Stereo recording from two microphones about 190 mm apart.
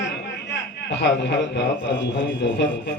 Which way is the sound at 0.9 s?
65° left (ahead or behind).